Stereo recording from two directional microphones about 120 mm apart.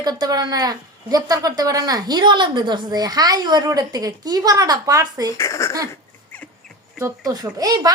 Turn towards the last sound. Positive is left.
turn(degrees=-30)  # may be behind; listen again after turning